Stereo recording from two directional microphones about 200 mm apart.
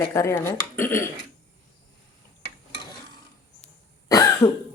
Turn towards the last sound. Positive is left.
turn(degrees=15)  # may be behind; listen again after turning